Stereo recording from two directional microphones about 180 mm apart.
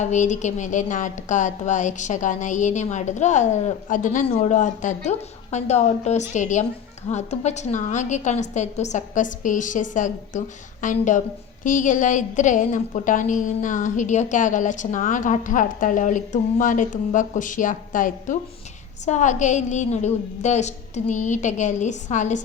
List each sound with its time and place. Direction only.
0.0 s a woman's voice: 40° left (ahead or behind)